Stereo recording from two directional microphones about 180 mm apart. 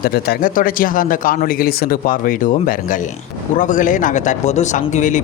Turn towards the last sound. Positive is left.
turn(degrees=45)  # may be behind; listen again after turning